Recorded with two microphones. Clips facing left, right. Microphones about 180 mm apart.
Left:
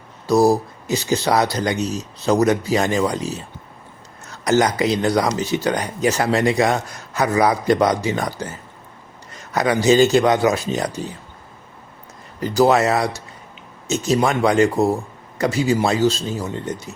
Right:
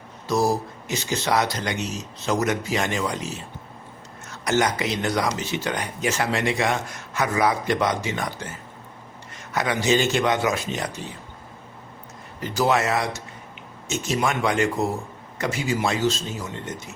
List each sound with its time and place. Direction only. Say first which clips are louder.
0.3 s speech: left 7 dB; 35° left (ahead or behind)
4.4 s speech: left 5 dB; 35° left (ahead or behind)
9.5 s speech: left 6 dB; 40° left (ahead or behind)
12.5 s speech: left 6 dB; 40° left (ahead or behind)